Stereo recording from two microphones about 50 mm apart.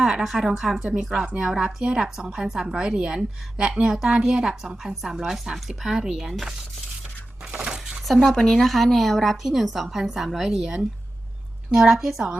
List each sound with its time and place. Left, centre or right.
0.0 s a woman's voice: centre
7.6 s a sound: centre
8.0 s a woman's voice: centre